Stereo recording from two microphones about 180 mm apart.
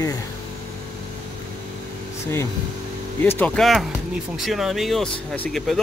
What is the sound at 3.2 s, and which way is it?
Speech, 10° left (ahead or behind).